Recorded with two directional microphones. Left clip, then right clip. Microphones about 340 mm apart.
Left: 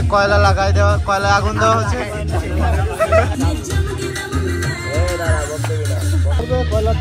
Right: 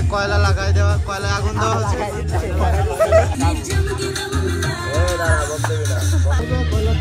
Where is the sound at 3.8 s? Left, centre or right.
Centre.